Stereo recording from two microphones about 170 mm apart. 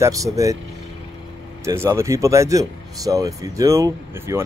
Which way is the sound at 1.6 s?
15° right (ahead or behind).